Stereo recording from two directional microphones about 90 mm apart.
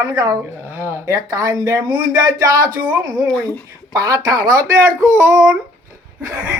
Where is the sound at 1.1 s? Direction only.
40° right (ahead or behind).